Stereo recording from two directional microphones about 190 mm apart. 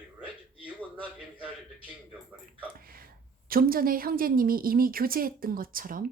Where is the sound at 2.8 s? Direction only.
50° right (ahead or behind).